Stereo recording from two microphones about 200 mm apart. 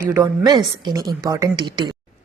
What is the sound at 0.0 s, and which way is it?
A woman's voice, 15° right (ahead or behind).